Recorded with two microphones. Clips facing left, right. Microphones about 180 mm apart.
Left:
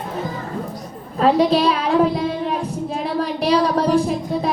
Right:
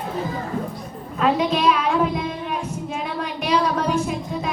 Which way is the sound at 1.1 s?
35° left (ahead or behind).